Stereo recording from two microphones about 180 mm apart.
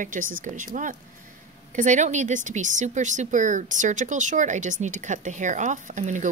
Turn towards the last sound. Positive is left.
turn(degrees=-45)  # may be behind; listen again after turning